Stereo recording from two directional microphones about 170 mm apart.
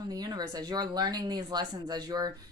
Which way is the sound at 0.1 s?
25° right (ahead or behind).